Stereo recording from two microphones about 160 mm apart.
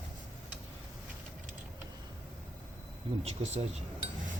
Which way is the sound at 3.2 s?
45° right (ahead or behind).